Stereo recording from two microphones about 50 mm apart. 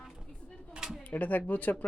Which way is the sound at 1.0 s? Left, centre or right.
Left.